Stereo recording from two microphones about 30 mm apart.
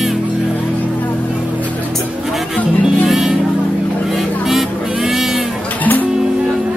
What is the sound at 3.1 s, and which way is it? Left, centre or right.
Music, centre.